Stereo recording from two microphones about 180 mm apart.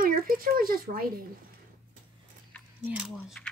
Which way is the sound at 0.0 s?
55° right (ahead or behind).